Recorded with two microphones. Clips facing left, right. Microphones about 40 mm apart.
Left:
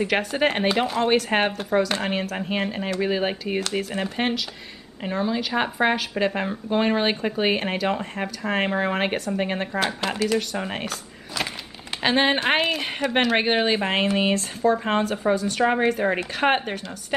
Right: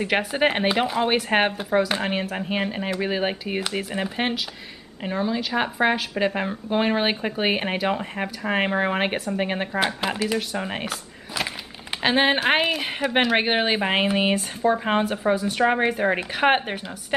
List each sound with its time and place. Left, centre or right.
0.0 s speech: centre